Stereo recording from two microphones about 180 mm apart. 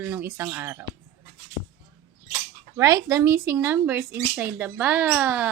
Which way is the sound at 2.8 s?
15° right (ahead or behind).